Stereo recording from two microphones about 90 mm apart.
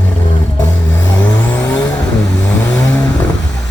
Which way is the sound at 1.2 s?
15° left (ahead or behind).